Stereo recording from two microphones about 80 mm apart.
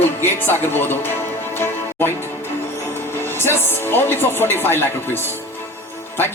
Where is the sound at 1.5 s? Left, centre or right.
Left.